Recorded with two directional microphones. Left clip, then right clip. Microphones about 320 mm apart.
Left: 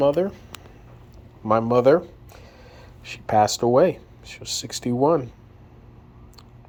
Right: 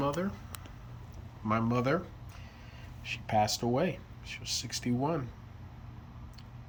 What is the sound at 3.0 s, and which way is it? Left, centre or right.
Speech, centre.